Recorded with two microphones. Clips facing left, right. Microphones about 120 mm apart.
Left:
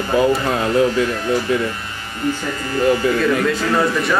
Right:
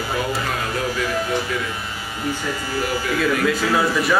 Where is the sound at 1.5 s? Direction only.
25° left (ahead or behind).